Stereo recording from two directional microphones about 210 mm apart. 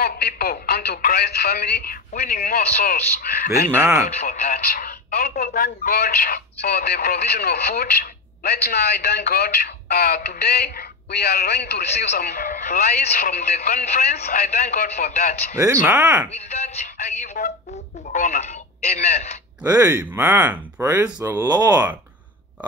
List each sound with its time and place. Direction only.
0.0 s speech: 45° left (ahead or behind)
3.7 s speech: 15° right (ahead or behind)
4.3 s speech: 45° left (ahead or behind)
15.5 s speech: 15° right (ahead or behind)
16.3 s speech: 30° left (ahead or behind)
19.6 s speech: 15° right (ahead or behind)